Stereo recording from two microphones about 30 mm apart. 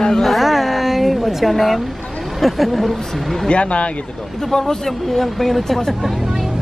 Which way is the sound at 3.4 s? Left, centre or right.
Left.